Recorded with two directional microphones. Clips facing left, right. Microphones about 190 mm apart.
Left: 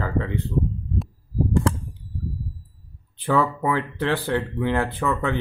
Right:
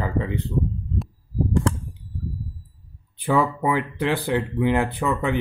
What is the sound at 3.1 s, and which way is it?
Speech, 15° right (ahead or behind).